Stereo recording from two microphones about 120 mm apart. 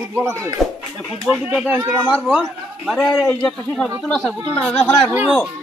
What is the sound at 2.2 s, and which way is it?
A man's voice, centre (ahead or behind).